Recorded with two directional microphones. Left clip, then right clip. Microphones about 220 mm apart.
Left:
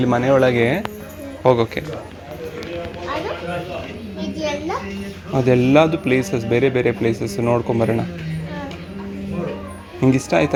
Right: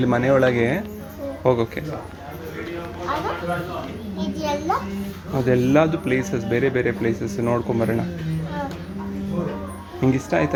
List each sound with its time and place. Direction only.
0.0 s speech: centre (ahead or behind)
4.2 s children playing: 15° right (ahead or behind)
5.3 s speech: 20° left (ahead or behind)
10.0 s speech: 20° left (ahead or behind)